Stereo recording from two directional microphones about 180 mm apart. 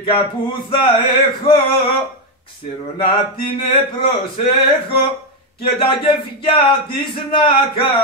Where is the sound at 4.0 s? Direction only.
30° left (ahead or behind).